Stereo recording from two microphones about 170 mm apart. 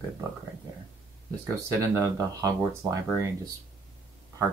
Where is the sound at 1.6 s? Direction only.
20° right (ahead or behind).